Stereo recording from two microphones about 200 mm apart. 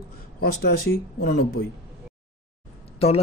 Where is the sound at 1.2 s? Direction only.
50° left (ahead or behind).